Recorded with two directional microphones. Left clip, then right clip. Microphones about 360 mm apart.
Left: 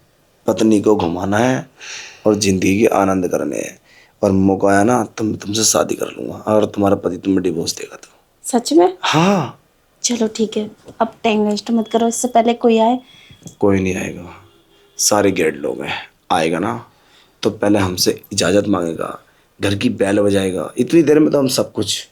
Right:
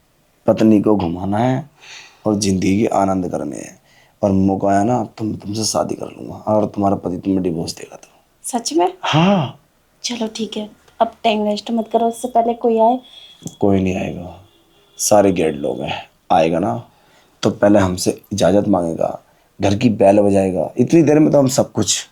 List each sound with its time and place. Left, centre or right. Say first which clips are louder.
0.4 s speech: even; centre
1.8 s a sound: left 6 dB; left
2.2 s speech: left 3 dB; centre
8.4 s speech: left 4 dB; centre
9.0 s speech: left 1 dB; centre
10.0 s a woman's voice: left 5 dB; centre
13.6 s speech: left 1 dB; centre; by 22.0 s right